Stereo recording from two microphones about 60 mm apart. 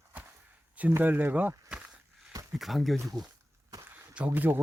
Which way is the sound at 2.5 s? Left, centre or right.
Centre.